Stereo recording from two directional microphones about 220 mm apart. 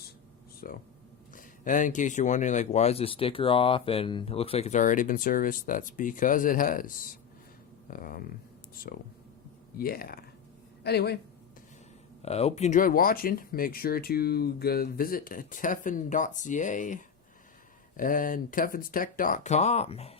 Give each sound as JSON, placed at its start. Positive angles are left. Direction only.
{"t": 0.6, "sound": "speech", "side_deg": 40}
{"t": 12.2, "sound": "speech", "side_deg": 30}